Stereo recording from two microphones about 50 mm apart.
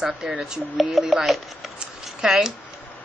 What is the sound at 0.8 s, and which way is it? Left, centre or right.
Speech, centre.